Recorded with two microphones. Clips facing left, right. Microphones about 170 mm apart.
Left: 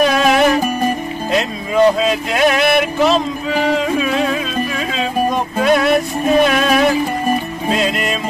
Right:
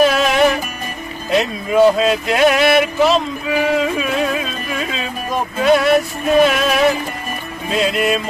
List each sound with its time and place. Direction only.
0.0 s music: 5° right (ahead or behind)
1.3 s a sound: centre (ahead or behind)
5.6 s music: centre (ahead or behind)